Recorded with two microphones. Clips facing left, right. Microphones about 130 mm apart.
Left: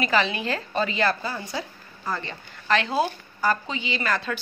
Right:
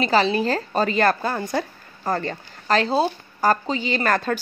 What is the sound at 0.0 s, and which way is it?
A woman's voice, 35° right (ahead or behind).